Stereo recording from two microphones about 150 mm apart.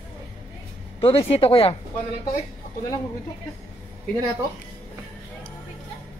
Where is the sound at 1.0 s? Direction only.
40° left (ahead or behind).